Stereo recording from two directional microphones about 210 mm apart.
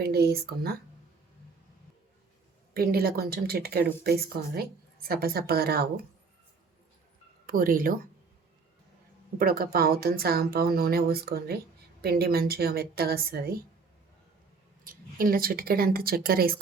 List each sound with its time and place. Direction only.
0.0 s speech: 50° right (ahead or behind)
2.7 s speech: 45° right (ahead or behind)
7.4 s speech: 40° right (ahead or behind)
9.4 s speech: 45° right (ahead or behind)
14.8 s speech: 45° right (ahead or behind)